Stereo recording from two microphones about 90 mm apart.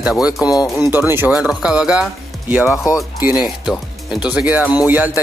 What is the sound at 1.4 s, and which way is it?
Speech, 5° right (ahead or behind).